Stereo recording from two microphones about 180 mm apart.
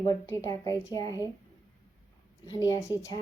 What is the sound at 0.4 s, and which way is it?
Speech, 20° left (ahead or behind).